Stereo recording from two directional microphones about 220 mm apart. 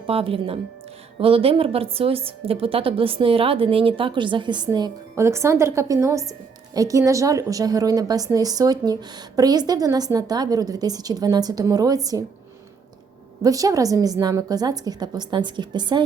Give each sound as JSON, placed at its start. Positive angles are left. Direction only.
{"t": 0.1, "sound": "a woman's voice", "side_deg": -25}
{"t": 13.4, "sound": "a woman's voice", "side_deg": -15}